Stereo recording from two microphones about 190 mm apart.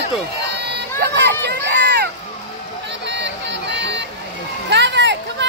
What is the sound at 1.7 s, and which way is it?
Run, 60° right (ahead or behind).